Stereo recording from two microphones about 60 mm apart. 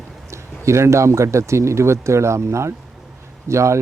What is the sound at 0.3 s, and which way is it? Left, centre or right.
Speech, right.